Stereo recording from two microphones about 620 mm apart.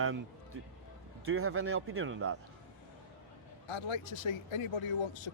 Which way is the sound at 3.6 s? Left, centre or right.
Left.